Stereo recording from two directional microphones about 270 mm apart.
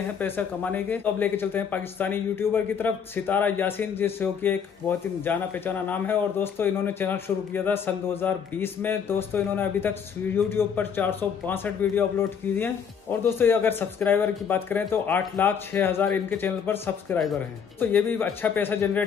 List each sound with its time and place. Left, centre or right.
0.2 s speech: centre